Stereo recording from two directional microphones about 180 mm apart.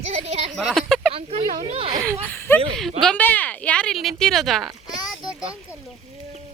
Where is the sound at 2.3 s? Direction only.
10° left (ahead or behind).